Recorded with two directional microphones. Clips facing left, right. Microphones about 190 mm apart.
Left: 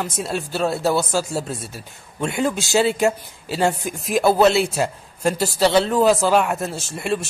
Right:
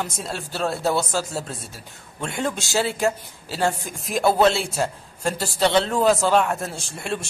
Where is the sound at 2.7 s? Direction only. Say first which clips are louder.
Left 4 dB; 20° left (ahead or behind).